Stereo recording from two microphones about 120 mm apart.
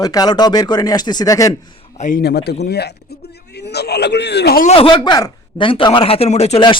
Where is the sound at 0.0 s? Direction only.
30° left (ahead or behind).